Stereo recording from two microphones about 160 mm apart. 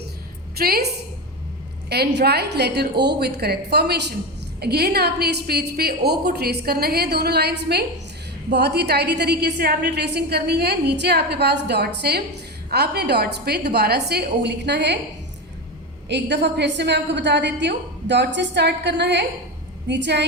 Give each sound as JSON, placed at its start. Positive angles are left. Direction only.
{"t": 0.5, "sound": "a woman's voice", "side_deg": -75}
{"t": 1.9, "sound": "a woman's voice", "side_deg": -90}
{"t": 16.0, "sound": "a woman's voice", "side_deg": -90}